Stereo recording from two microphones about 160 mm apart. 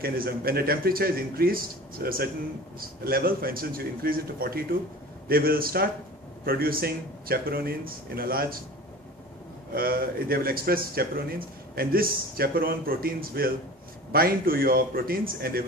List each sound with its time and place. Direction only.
0.0 s speech: 70° right (ahead or behind)
9.7 s speech: 65° right (ahead or behind)